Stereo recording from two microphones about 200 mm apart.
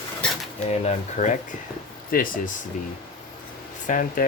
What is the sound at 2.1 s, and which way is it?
Speech, 45° left (ahead or behind).